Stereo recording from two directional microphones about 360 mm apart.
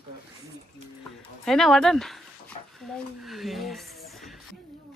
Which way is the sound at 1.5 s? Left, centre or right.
Centre.